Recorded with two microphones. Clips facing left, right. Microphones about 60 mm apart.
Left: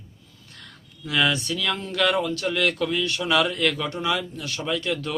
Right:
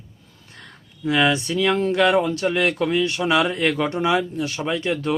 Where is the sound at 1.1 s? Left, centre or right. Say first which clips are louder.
Right 4 dB; right.